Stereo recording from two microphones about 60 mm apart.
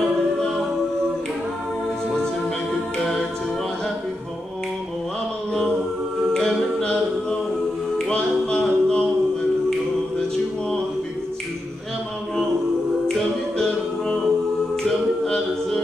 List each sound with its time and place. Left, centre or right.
6.3 s a capella: centre
8.1 s music: centre
13.6 s music: centre